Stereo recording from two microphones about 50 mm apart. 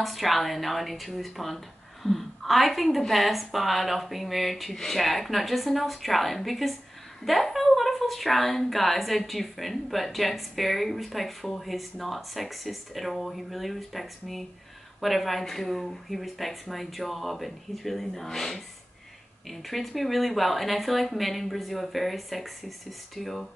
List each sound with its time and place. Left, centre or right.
0.0 s a woman's voice: centre